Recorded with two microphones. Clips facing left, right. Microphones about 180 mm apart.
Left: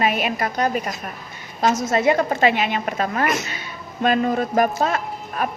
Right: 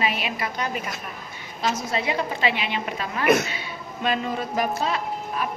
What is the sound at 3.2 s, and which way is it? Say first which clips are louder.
Speech: right 3 dB; 60° right (ahead or behind).